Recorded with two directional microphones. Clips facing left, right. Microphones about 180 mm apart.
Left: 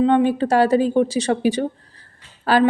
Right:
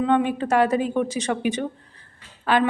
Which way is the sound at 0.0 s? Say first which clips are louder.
Left 5 dB; 30° left (ahead or behind).